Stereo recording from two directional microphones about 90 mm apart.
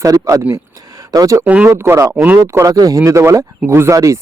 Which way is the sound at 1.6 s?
25° right (ahead or behind).